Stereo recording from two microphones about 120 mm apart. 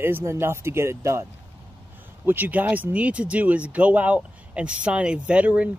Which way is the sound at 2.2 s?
15° right (ahead or behind).